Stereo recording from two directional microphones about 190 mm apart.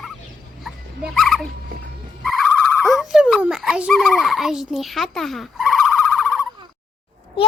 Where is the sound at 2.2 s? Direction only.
Centre (ahead or behind).